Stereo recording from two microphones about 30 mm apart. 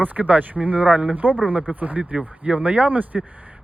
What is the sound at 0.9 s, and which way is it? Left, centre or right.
Speech, right.